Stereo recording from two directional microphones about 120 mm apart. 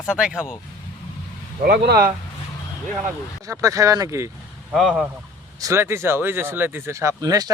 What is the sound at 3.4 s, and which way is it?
Speech, 25° right (ahead or behind).